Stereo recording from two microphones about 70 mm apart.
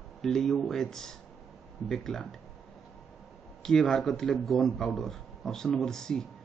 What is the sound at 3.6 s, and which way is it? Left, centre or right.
A man's voice, centre.